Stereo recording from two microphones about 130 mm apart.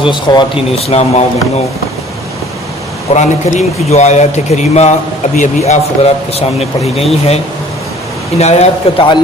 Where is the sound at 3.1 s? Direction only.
65° left (ahead or behind).